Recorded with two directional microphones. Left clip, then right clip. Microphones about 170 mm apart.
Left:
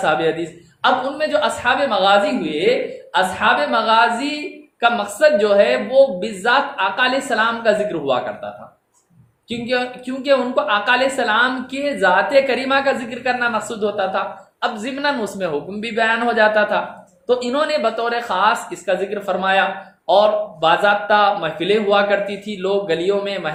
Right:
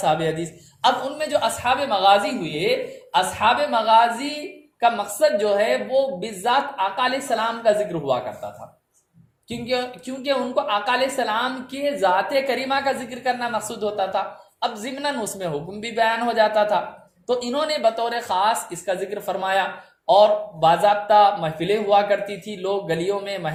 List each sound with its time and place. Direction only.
0.0 s a woman's voice: 40° right (ahead or behind)
9.5 s a woman's voice: 40° right (ahead or behind)